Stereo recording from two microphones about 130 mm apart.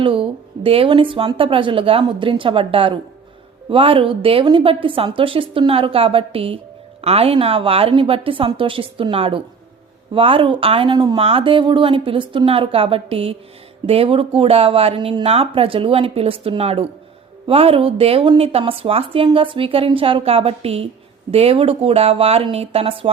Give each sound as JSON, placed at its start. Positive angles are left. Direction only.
{"t": 0.0, "sound": "speech", "side_deg": -45}
{"t": 11.2, "sound": "speech", "side_deg": -45}